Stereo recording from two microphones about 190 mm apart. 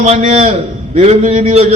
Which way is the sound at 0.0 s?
35° right (ahead or behind).